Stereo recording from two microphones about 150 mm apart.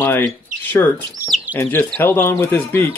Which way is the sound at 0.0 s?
15° left (ahead or behind).